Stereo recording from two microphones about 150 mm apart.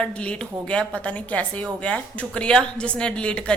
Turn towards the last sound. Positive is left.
turn(degrees=5)  # may be behind; listen again after turning